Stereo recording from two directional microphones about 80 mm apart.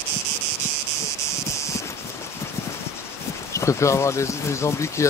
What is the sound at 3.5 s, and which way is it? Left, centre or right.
Speech, left.